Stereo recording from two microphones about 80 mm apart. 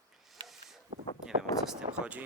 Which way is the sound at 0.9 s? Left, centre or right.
Right.